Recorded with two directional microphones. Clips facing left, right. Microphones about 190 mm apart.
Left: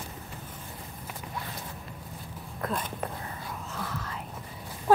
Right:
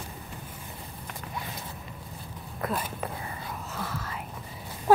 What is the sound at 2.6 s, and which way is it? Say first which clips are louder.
Whispering: right 1 dB; 5° right (ahead or behind).